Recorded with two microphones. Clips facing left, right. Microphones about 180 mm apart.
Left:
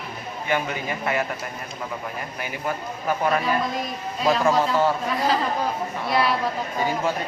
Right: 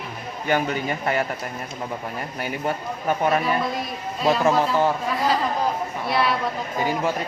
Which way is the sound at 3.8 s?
Centre (ahead or behind).